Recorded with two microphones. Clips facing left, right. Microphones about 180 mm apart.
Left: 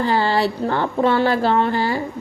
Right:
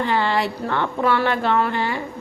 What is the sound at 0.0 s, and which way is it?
A woman's voice, 35° left (ahead or behind).